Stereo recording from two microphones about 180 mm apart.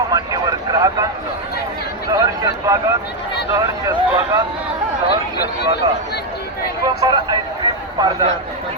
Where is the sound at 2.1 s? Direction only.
20° right (ahead or behind).